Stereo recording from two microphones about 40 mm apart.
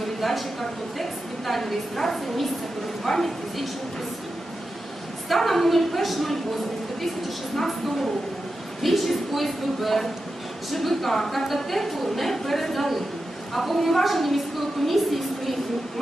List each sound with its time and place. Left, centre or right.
0.0 s a sound: centre
1.5 s a woman's voice: centre
5.3 s a woman's voice: centre
7.5 s a woman's voice: centre